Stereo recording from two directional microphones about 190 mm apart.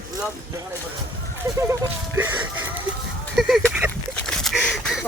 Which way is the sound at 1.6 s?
15° right (ahead or behind).